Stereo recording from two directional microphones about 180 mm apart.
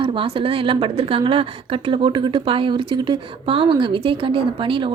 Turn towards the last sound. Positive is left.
turn(degrees=-30)  # may be behind; listen again after turning